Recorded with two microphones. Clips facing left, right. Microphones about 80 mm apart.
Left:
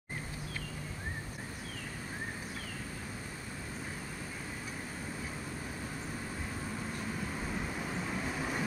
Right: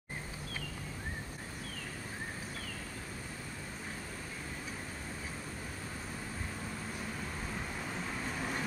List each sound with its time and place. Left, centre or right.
7.8 s train: centre